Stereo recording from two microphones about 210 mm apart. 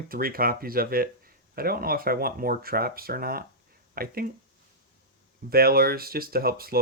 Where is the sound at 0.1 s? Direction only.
45° right (ahead or behind).